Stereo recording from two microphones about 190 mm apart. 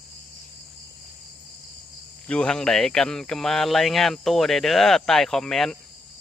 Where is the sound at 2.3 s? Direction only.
5° left (ahead or behind).